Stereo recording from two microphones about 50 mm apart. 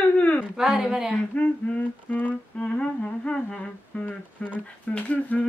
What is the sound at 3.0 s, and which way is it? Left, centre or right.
Humming, centre.